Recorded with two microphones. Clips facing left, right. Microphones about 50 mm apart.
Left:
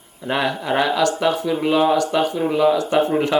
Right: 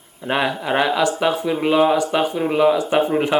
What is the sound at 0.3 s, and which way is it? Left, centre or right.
Speech, centre.